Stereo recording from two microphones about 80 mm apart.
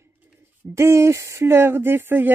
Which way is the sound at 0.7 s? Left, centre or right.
Right.